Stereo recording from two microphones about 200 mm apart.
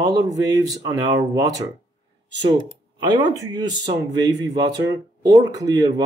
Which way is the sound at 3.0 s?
20° right (ahead or behind).